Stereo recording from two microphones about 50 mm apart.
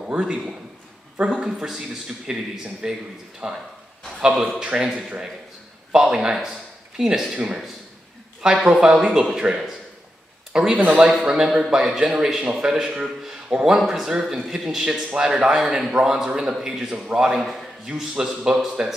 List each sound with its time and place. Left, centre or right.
0.1 s a man's voice: centre